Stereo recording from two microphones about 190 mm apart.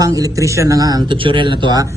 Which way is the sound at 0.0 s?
15° right (ahead or behind).